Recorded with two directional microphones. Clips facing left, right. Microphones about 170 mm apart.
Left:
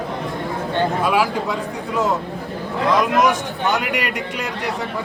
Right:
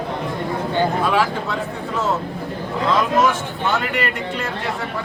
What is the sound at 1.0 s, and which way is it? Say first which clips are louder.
Speech: left 1 dB; 10° left (ahead or behind).